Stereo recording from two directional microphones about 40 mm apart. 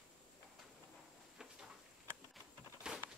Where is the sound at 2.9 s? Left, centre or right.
Centre.